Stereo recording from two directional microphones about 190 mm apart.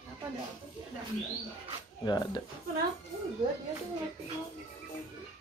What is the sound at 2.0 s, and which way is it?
Speech, 20° left (ahead or behind).